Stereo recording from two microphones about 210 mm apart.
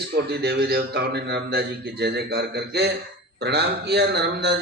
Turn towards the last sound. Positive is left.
turn(degrees=-50)  # may be behind; listen again after turning